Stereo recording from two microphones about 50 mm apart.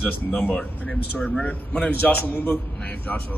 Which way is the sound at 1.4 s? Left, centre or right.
Left.